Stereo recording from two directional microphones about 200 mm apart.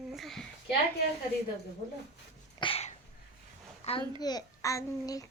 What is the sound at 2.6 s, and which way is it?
Sneeze, 25° left (ahead or behind).